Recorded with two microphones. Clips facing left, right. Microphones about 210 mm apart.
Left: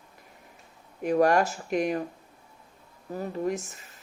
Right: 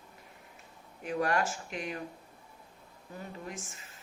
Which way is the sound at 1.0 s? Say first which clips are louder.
Left 9 dB; 45° left (ahead or behind).